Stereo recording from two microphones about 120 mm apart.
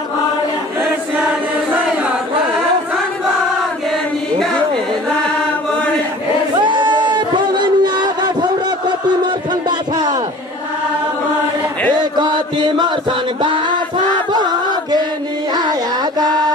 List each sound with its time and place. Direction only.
6.6 s music: 40° right (ahead or behind)
11.9 s chant: 35° right (ahead or behind)
14.3 s a sound: 35° right (ahead or behind)
15.5 s music: 35° right (ahead or behind)